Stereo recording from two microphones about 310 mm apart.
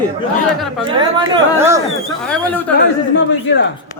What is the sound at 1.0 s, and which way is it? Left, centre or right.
Speech, centre.